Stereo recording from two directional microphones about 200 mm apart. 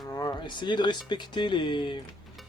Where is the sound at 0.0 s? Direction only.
20° left (ahead or behind).